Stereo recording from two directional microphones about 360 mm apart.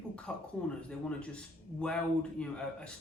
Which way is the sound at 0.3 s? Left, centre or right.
Centre.